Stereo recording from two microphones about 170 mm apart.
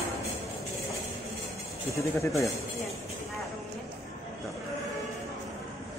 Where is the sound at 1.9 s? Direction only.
15° left (ahead or behind).